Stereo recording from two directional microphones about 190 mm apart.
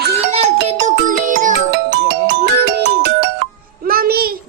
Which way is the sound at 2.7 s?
60° right (ahead or behind).